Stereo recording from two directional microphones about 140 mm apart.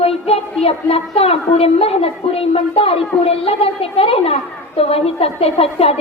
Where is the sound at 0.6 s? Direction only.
45° left (ahead or behind).